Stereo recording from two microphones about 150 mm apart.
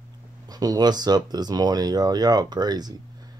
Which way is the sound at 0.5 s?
25° right (ahead or behind).